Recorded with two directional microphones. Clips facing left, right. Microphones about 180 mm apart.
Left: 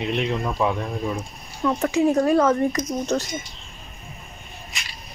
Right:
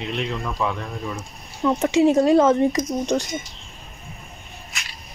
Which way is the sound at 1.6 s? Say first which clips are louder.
Right 3 dB; 25° right (ahead or behind).